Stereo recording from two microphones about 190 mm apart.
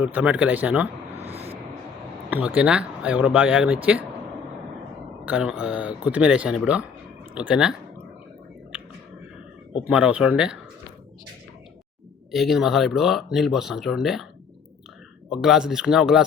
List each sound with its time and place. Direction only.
0.0 s speech: 10° right (ahead or behind)
1.2 s a sound: 30° right (ahead or behind)
2.3 s speech: 10° right (ahead or behind)
5.2 s speech: 5° right (ahead or behind)
9.8 s speech: 5° right (ahead or behind)
12.3 s speech: centre (ahead or behind)
15.3 s speech: centre (ahead or behind)